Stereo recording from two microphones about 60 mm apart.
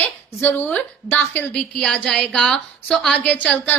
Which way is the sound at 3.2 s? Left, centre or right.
Left.